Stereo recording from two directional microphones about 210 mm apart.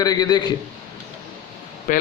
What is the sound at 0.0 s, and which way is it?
Speech, 20° left (ahead or behind).